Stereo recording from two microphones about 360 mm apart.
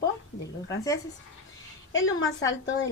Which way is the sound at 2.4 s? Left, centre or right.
Left.